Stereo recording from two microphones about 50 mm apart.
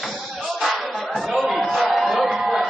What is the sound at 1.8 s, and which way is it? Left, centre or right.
Crowd, centre.